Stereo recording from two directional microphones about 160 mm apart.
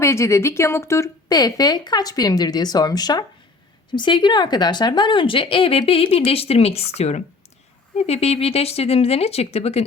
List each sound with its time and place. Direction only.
0.0 s speech: 20° left (ahead or behind); by 9.8 s 40° left (ahead or behind)